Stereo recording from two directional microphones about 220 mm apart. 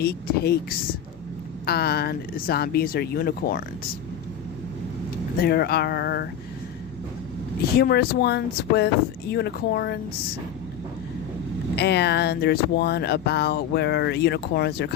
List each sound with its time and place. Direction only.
0.0 s speech: 45° left (ahead or behind)
5.4 s speech: 45° left (ahead or behind)
7.8 s speech: 45° left (ahead or behind)
11.8 s speech: 50° left (ahead or behind)